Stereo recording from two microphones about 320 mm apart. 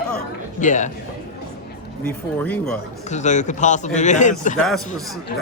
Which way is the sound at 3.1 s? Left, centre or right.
Left.